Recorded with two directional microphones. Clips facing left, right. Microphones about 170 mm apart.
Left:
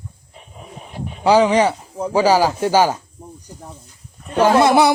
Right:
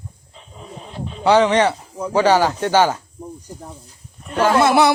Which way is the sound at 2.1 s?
10° left (ahead or behind).